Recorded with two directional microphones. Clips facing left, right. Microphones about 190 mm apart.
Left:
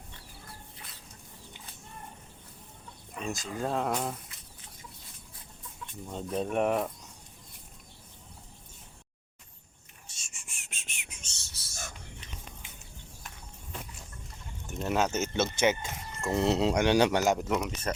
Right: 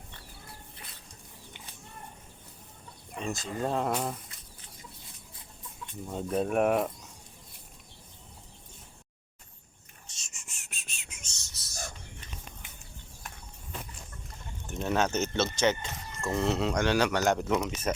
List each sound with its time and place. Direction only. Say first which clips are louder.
3.2 s speech: right 1 dB; centre (ahead or behind)
6.1 s speech: right 3 dB; 5° right (ahead or behind)
10.3 s a sound: even; 15° left (ahead or behind)
11.2 s whispering: even; 30° left (ahead or behind)
14.7 s speech: even; 5° left (ahead or behind); by 17.2 s 20° left (ahead or behind)
17.2 s speech: right 1 dB; centre (ahead or behind)